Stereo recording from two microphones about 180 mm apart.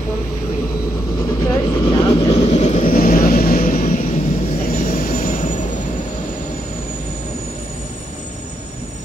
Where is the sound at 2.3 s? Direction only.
35° left (ahead or behind).